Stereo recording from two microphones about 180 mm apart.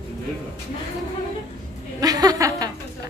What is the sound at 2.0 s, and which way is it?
Speech, 20° right (ahead or behind).